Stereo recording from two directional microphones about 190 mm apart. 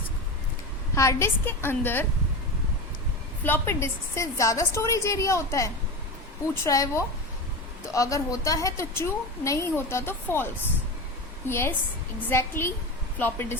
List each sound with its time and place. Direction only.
0.9 s a woman's voice: 15° left (ahead or behind)
3.4 s a woman's voice: 10° left (ahead or behind)